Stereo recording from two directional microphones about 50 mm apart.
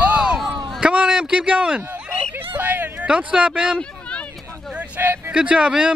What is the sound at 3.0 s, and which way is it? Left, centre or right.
Speech, right.